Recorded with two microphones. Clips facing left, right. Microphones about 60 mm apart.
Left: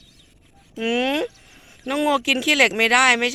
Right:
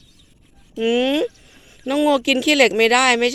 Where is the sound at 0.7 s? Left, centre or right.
Left.